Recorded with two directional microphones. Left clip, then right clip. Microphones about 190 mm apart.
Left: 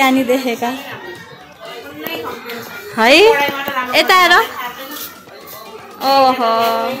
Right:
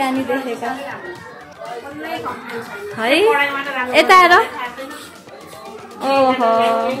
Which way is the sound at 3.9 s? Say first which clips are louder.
Right 1 dB; 10° right (ahead or behind).